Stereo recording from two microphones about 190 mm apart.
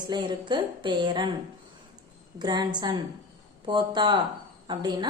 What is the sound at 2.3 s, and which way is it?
A woman's voice, 20° right (ahead or behind).